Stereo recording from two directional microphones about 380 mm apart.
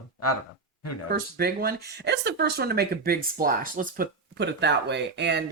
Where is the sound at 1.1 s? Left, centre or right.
Right.